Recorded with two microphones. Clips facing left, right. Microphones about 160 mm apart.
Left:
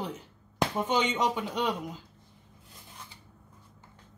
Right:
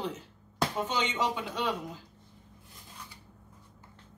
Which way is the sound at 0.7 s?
20° left (ahead or behind).